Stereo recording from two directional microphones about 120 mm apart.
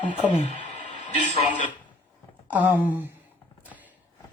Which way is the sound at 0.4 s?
90° left.